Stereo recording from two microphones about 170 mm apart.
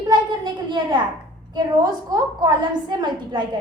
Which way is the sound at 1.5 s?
25° right (ahead or behind).